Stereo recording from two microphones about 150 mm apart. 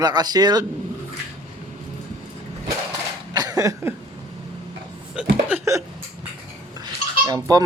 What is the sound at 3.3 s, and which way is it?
Cough, 25° right (ahead or behind).